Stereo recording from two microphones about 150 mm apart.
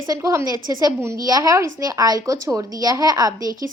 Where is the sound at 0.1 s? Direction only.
20° right (ahead or behind).